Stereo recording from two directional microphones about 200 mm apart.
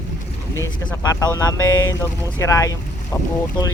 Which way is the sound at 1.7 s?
80° left.